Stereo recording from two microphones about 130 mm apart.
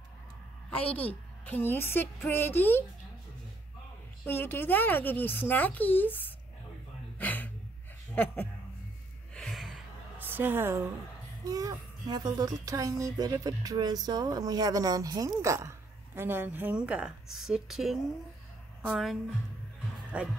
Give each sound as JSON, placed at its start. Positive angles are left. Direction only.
{"t": 0.9, "sound": "speech", "side_deg": 10}
{"t": 4.3, "sound": "speech", "side_deg": 15}
{"t": 7.2, "sound": "a sound", "side_deg": 10}
{"t": 8.1, "sound": "speech", "side_deg": 15}
{"t": 9.3, "sound": "gasp", "side_deg": 0}
{"t": 10.1, "sound": "a woman's voice", "side_deg": -15}
{"t": 11.4, "sound": "a woman's voice", "side_deg": -30}
{"t": 20.1, "sound": "a woman's voice", "side_deg": -10}